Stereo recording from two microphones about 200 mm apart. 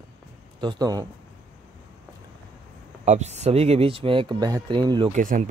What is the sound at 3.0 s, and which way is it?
Speech, 35° right (ahead or behind).